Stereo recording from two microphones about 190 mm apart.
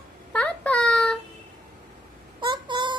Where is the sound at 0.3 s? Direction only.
5° left (ahead or behind).